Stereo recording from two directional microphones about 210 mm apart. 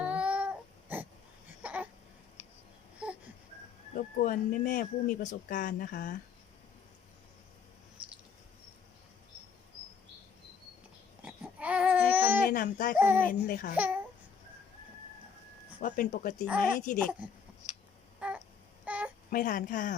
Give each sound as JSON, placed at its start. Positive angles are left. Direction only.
{"t": 0.0, "sound": "a sound", "side_deg": -5}
{"t": 3.9, "sound": "speech", "side_deg": 40}
{"t": 11.2, "sound": "babbling", "side_deg": -5}
{"t": 12.5, "sound": "speech", "side_deg": 45}
{"t": 13.0, "sound": "speech", "side_deg": -10}
{"t": 13.2, "sound": "speech", "side_deg": 45}
{"t": 13.7, "sound": "speech", "side_deg": -5}
{"t": 15.8, "sound": "speech", "side_deg": 40}
{"t": 18.2, "sound": "a sound", "side_deg": -5}
{"t": 19.3, "sound": "speech", "side_deg": 40}